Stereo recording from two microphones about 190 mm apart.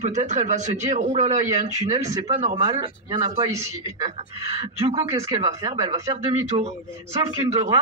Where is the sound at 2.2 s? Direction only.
40° right (ahead or behind).